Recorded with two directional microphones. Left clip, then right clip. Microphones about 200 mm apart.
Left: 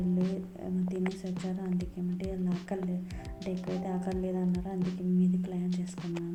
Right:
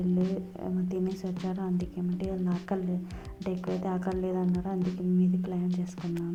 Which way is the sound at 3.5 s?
Centre (ahead or behind).